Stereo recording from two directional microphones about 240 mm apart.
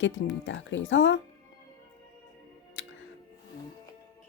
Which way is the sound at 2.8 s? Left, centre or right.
Left.